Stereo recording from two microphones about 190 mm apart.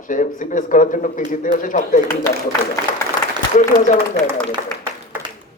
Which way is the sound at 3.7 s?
45° left (ahead or behind).